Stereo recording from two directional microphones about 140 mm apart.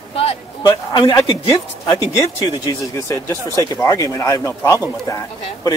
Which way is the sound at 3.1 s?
20° left (ahead or behind).